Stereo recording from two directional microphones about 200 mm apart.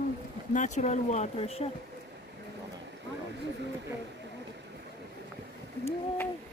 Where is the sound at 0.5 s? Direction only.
35° left (ahead or behind).